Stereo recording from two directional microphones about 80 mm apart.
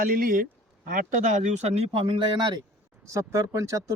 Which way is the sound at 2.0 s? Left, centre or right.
Right.